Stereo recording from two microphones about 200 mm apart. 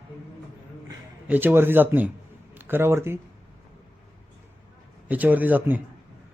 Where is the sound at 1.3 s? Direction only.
10° right (ahead or behind).